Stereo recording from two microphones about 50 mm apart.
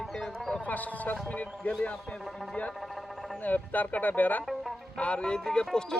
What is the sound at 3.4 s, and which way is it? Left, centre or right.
Speech, left.